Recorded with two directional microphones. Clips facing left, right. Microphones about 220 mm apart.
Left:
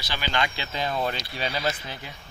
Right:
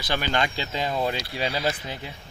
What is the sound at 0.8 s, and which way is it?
Speech, 10° right (ahead or behind).